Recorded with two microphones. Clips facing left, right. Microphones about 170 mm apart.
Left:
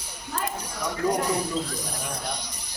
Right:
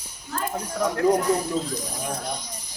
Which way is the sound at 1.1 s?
70° left (ahead or behind).